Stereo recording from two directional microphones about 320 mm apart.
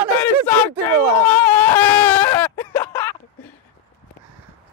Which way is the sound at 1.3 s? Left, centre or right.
Centre.